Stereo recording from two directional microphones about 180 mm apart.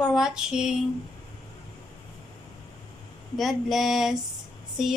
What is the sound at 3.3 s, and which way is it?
Speech, centre (ahead or behind).